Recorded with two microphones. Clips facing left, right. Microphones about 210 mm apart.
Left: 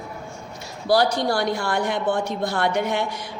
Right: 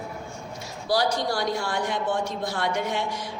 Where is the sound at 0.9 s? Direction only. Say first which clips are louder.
Left 5 dB; 60° left (ahead or behind).